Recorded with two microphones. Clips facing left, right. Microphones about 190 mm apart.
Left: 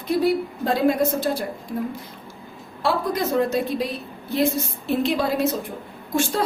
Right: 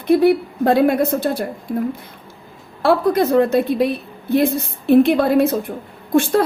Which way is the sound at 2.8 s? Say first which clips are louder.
Right 8 dB; 60° right (ahead or behind).